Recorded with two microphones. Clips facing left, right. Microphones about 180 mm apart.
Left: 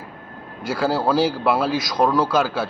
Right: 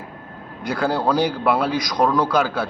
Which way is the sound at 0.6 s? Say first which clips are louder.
Even; 5° left (ahead or behind).